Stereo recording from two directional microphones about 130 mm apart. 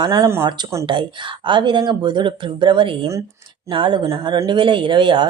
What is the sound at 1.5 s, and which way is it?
Speech, 35° right (ahead or behind).